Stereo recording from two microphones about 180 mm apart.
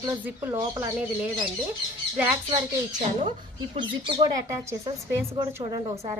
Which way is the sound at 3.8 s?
25° right (ahead or behind).